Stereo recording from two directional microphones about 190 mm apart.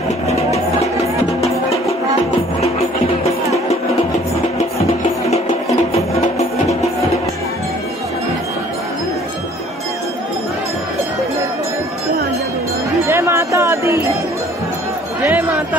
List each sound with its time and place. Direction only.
5.9 s music: 35° left (ahead or behind)
13.0 s music: 15° right (ahead or behind)
15.2 s a sound: 15° right (ahead or behind)